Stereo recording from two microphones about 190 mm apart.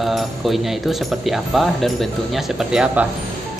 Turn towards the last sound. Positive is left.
turn(degrees=-5)  # may be behind; listen again after turning